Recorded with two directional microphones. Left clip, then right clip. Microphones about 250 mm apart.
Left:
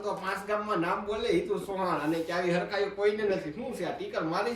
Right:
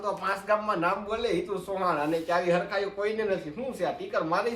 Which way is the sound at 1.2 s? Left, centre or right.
Centre.